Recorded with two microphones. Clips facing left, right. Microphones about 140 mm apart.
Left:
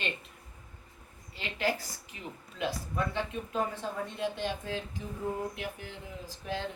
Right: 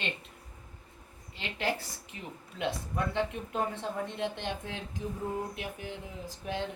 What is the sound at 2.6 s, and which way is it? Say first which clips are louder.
Speech: even; 20° right (ahead or behind).